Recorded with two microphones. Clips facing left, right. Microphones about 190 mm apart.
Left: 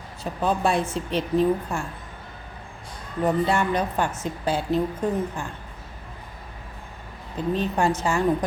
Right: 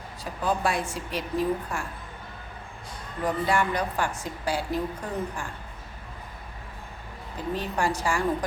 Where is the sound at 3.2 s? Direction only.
25° left (ahead or behind).